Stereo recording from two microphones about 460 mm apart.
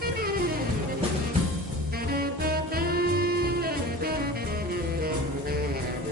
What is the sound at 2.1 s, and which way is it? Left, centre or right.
Music, centre.